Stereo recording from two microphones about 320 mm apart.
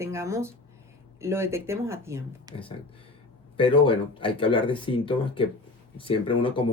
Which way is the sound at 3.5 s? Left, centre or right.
Centre.